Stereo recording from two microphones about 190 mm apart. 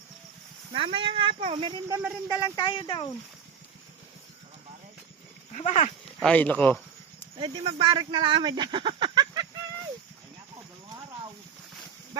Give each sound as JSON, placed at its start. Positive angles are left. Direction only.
{"t": 0.7, "sound": "speech", "side_deg": -30}
{"t": 1.9, "sound": "speech", "side_deg": -10}
{"t": 2.4, "sound": "speech", "side_deg": 25}
{"t": 5.5, "sound": "speech", "side_deg": 40}
{"t": 6.1, "sound": "speech", "side_deg": 5}
{"t": 7.3, "sound": "speech", "side_deg": -25}